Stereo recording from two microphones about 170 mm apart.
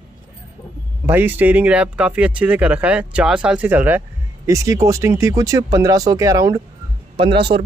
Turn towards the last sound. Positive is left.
turn(degrees=-30)  # may be behind; listen again after turning